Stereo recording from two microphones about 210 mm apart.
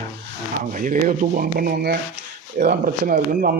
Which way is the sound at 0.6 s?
40° right (ahead or behind).